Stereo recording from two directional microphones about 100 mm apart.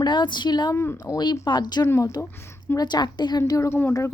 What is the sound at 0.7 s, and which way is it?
Speech, 30° left (ahead or behind).